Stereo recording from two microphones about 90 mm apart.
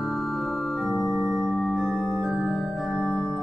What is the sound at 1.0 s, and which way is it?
Music, 20° right (ahead or behind).